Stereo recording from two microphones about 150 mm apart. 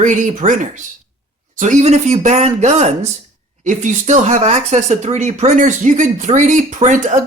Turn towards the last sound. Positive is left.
turn(degrees=-55)  # may be behind; listen again after turning